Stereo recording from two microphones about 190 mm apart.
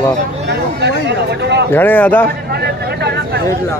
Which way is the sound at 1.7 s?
10° left (ahead or behind).